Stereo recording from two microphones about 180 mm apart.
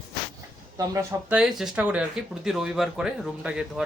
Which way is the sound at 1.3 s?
Centre (ahead or behind).